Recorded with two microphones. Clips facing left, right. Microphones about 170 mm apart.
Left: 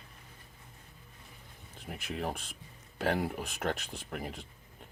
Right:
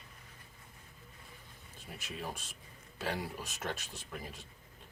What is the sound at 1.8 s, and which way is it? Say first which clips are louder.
Speech: left 6 dB; 60° left (ahead or behind).